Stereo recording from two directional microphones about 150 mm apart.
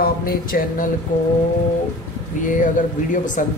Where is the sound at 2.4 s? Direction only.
60° left (ahead or behind).